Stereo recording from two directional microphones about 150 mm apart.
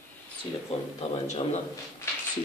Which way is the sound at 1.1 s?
50° left (ahead or behind).